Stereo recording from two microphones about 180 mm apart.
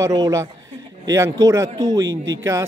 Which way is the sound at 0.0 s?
20° right (ahead or behind).